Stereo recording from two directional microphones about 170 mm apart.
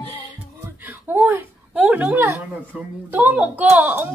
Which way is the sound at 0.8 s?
10° right (ahead or behind).